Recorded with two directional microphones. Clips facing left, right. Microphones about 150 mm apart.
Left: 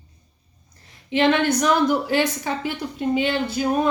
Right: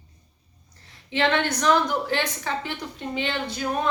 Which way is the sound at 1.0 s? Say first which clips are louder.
Left 5 dB; 15° left (ahead or behind).